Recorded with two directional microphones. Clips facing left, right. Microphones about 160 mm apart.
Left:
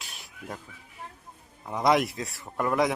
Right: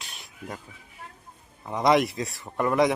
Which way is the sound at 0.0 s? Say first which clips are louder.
Right 2 dB; 5° left (ahead or behind).